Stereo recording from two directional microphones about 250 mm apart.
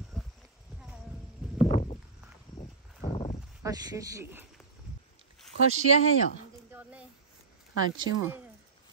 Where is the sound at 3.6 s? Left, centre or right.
Centre.